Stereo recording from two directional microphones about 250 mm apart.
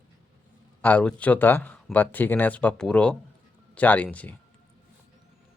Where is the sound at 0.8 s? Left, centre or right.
Centre.